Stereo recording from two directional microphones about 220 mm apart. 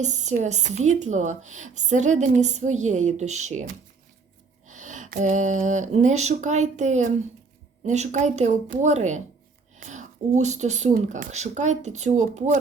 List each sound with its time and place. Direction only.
0.0 s a woman's voice: 30° right (ahead or behind)